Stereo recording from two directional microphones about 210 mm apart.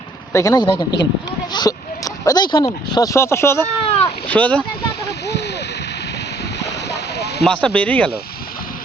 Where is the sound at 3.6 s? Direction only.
30° left (ahead or behind).